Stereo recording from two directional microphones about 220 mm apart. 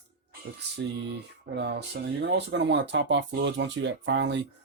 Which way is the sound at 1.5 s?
50° right (ahead or behind).